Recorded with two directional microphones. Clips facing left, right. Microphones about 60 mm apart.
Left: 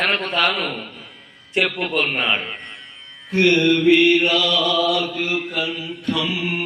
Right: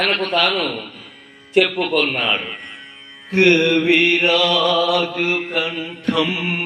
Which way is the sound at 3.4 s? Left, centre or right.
Right.